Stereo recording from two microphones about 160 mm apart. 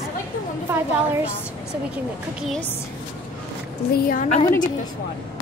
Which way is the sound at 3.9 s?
65° left (ahead or behind).